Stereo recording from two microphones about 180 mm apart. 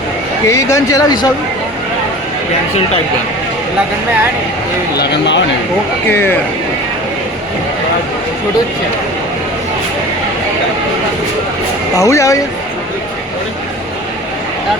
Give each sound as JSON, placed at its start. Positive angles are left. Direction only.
{"t": 0.4, "sound": "speech", "side_deg": 15}
{"t": 4.9, "sound": "speech", "side_deg": 75}
{"t": 6.1, "sound": "speech", "side_deg": 10}
{"t": 11.9, "sound": "speech", "side_deg": 15}